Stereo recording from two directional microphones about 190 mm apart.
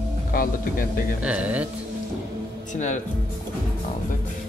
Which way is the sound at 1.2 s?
5° right (ahead or behind).